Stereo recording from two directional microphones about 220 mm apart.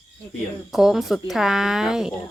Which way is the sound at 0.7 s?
Centre (ahead or behind).